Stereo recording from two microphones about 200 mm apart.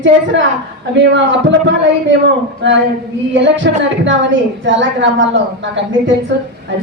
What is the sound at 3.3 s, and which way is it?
A woman's voice, 65° right (ahead or behind).